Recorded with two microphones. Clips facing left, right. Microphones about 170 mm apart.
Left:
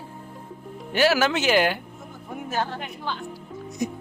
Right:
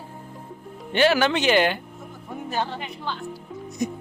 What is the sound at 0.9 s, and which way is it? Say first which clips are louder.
Speech: right 1 dB; 5° left (ahead or behind).